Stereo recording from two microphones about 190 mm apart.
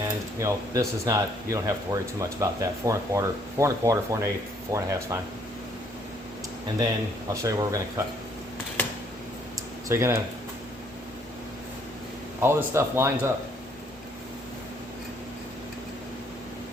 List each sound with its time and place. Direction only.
0.0 s speech: 15° right (ahead or behind)
7.4 s speech: 15° right (ahead or behind)
9.9 s speech: 15° right (ahead or behind)
12.4 s speech: 15° right (ahead or behind)